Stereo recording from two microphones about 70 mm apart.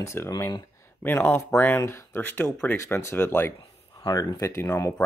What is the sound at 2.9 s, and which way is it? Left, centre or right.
Speech, left.